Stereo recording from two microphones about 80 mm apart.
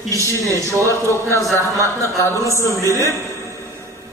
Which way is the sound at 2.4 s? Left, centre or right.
Left.